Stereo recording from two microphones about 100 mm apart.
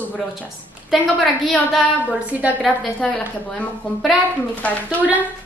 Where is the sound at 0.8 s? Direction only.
Centre (ahead or behind).